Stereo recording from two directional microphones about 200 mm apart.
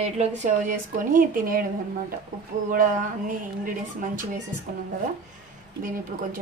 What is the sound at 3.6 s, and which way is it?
Speech, 40° right (ahead or behind).